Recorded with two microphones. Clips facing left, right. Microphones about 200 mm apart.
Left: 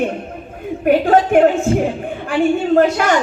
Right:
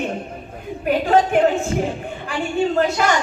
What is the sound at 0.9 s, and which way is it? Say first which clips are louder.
Speech: left 4 dB; 50° left (ahead or behind).